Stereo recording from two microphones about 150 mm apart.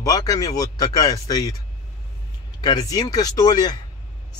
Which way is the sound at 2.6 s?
25° left (ahead or behind).